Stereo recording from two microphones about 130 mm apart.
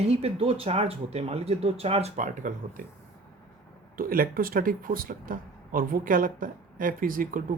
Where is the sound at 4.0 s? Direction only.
90° right.